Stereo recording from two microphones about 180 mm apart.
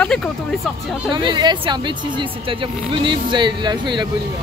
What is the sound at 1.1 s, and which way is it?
Speech, 25° right (ahead or behind).